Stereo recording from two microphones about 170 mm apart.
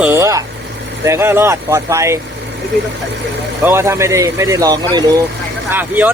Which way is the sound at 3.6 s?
15° right (ahead or behind).